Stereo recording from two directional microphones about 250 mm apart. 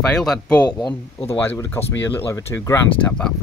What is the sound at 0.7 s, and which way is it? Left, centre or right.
Speech, centre.